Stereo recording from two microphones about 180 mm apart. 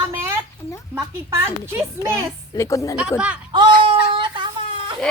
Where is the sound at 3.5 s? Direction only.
25° right (ahead or behind).